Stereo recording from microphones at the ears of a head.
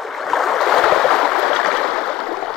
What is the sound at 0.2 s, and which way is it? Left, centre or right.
Stream, left.